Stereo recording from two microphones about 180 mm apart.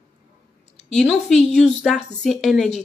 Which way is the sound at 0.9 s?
Centre (ahead or behind).